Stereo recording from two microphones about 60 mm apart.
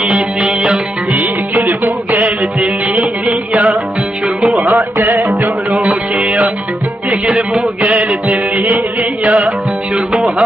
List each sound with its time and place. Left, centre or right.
0.4 s music: centre
1.1 s music: right
4.4 s music: centre
4.9 s music: right
7.6 s music: right
8.3 s music: right